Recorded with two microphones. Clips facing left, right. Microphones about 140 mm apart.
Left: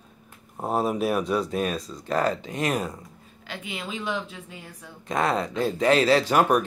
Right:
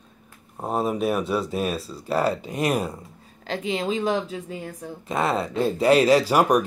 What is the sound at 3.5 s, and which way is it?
A woman's voice, 35° right (ahead or behind).